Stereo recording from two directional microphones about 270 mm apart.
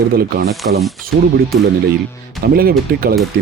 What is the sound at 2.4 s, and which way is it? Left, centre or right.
Speech, right.